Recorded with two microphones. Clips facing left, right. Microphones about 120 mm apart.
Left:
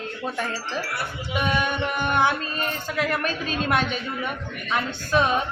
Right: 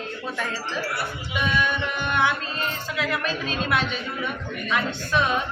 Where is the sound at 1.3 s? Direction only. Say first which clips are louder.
Left 1 dB; 45° left (ahead or behind).